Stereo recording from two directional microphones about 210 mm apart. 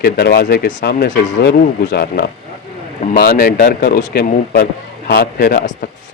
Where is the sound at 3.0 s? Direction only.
35° left (ahead or behind).